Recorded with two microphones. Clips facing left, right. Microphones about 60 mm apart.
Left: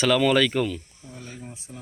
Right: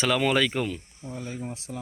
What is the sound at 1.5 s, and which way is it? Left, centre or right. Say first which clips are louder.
Speech: right 5 dB; right.